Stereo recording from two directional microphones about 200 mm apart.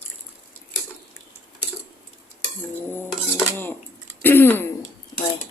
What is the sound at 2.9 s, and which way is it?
Dishes, 10° left (ahead or behind).